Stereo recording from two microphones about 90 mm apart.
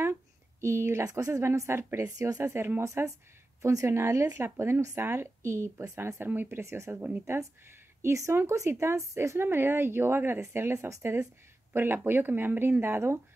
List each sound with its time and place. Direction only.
0.0 s speech: 30° right (ahead or behind)
2.0 s speech: 40° right (ahead or behind)
2.4 s speech: 25° right (ahead or behind)